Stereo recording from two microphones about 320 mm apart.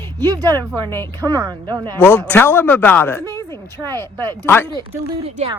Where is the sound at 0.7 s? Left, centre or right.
Centre.